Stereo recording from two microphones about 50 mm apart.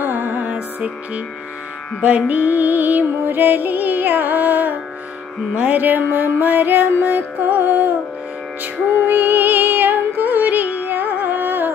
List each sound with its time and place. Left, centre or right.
0.0 s music: right
5.5 s music: right
5.8 s music: right
9.0 s music: right